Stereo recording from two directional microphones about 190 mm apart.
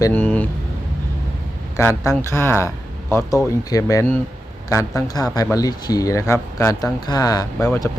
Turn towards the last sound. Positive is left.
turn(degrees=15)  # may be behind; listen again after turning